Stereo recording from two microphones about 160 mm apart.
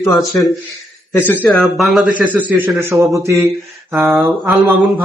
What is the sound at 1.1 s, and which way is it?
Speech, 10° left (ahead or behind).